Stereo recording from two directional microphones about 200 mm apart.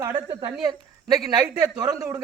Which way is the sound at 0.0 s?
15° right (ahead or behind).